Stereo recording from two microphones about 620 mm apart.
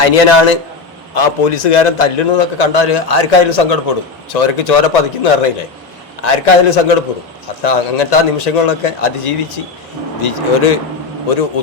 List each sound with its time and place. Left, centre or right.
0.0 s a man's voice: left